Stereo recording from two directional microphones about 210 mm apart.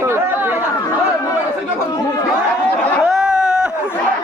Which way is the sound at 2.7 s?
5° left (ahead or behind).